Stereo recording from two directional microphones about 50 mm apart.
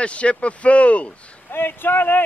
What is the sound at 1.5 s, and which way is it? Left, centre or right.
Speech, left.